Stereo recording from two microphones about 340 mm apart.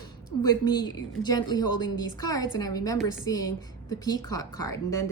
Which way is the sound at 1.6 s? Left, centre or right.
Left.